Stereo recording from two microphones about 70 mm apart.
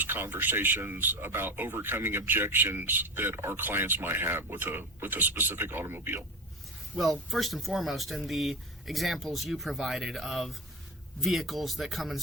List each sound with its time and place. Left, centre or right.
0.0 s speech: right
7.0 s speech: centre